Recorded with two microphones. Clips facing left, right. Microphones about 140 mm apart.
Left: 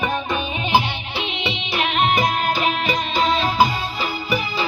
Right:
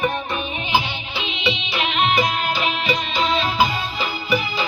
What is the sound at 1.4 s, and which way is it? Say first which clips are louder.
Music: right 2 dB; 50° left (ahead or behind).